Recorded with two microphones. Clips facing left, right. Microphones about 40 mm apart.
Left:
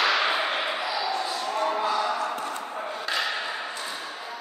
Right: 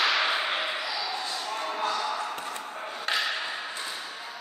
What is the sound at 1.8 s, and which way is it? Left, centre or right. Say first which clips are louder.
Basketball bounce: left 3 dB; centre.